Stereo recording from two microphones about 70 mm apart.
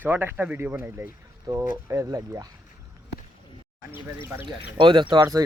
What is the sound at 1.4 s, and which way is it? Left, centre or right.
Speech, right.